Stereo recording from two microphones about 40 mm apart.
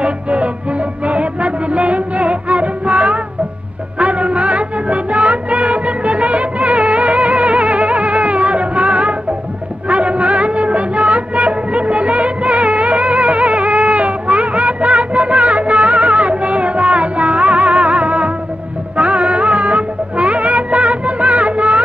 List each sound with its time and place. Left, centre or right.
0.0 s music: right